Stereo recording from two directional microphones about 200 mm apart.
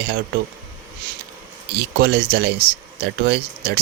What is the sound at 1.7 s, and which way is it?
Speech, 55° right (ahead or behind).